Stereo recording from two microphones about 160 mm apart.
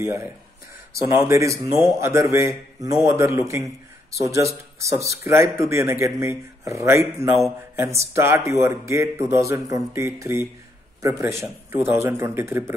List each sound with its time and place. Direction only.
0.0 s a man's voice: 15° right (ahead or behind)